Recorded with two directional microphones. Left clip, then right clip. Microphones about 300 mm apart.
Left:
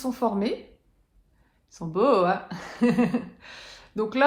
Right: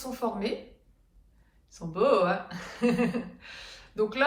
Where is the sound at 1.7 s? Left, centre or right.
Left.